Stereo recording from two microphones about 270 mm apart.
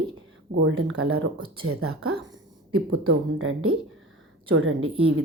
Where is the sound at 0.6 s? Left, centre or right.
Right.